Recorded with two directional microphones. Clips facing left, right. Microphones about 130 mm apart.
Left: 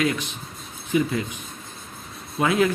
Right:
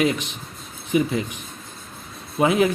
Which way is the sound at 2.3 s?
20° right (ahead or behind).